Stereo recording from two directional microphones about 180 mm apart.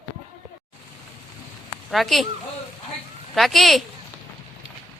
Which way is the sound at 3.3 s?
Centre (ahead or behind).